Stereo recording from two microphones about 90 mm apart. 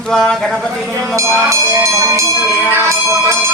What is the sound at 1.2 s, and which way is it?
Speech, 35° right (ahead or behind).